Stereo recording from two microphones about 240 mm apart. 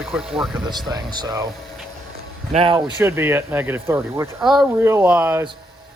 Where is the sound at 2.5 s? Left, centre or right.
Right.